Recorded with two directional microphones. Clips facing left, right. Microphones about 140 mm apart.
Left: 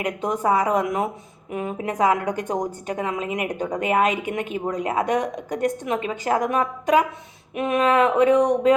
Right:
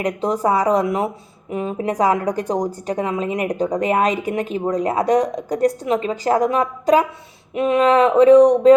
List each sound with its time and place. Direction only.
0.0 s a woman's voice: 35° right (ahead or behind)